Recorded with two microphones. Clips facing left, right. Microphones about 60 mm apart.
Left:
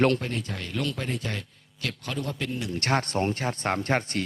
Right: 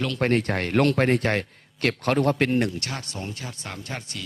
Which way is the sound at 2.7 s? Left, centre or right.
Left.